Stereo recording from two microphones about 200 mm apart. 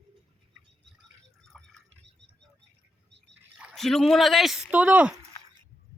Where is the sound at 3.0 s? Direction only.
60° right (ahead or behind).